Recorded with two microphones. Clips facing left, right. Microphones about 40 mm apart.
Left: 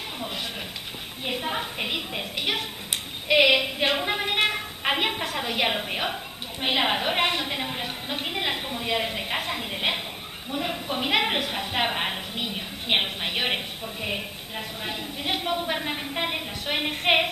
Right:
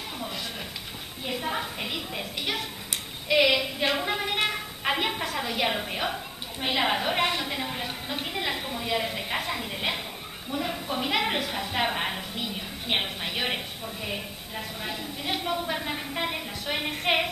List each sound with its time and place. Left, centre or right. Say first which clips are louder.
1.4 s a woman's voice: even; centre
1.9 s a woman's voice: left 3 dB; left
12.4 s a woman's voice: left 2 dB; left